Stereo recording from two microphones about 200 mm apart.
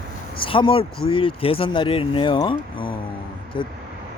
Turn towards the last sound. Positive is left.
turn(degrees=25)  # may be behind; listen again after turning